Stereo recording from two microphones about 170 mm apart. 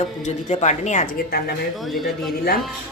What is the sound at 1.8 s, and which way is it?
Speech, centre (ahead or behind).